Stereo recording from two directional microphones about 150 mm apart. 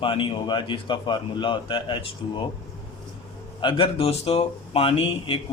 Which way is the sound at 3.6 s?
35° left (ahead or behind).